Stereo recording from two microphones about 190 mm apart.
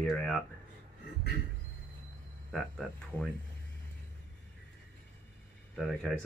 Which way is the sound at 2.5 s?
Centre (ahead or behind).